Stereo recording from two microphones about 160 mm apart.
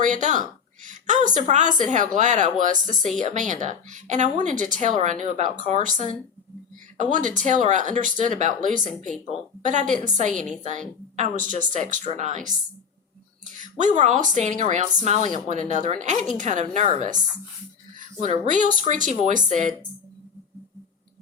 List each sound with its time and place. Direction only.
0.0 s a woman's voice: 50° right (ahead or behind)